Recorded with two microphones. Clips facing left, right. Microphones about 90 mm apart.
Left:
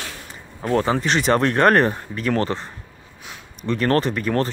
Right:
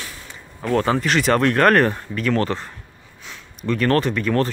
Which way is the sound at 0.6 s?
30° left (ahead or behind).